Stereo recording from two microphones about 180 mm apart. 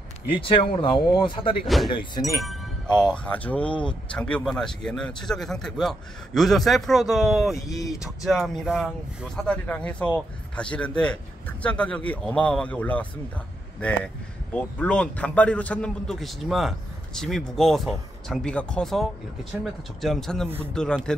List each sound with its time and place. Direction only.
0.3 s speech: 30° left (ahead or behind)
3.0 s speech: 5° left (ahead or behind)